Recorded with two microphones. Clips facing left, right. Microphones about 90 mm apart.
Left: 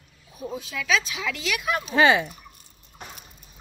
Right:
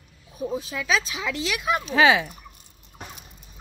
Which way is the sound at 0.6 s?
30° right (ahead or behind).